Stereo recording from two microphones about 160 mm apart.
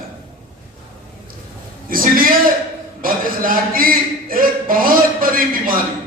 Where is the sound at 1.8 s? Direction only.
60° right (ahead or behind).